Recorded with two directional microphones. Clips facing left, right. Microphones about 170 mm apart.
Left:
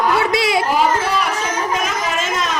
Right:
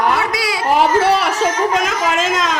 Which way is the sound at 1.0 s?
70° right (ahead or behind).